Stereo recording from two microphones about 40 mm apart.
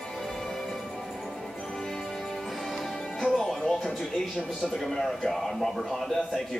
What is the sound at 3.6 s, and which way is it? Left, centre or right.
A man's voice, centre.